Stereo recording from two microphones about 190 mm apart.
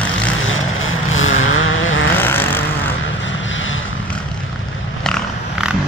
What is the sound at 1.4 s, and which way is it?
Vehicle, 90° left.